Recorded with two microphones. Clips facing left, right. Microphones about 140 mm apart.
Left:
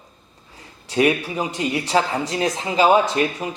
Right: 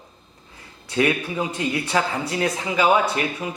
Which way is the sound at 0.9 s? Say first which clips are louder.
Left 2 dB; 20° left (ahead or behind).